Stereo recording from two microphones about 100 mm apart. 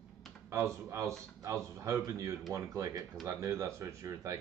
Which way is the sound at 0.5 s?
30° right (ahead or behind).